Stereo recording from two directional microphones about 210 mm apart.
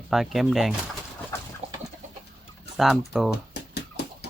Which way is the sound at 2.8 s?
Centre (ahead or behind).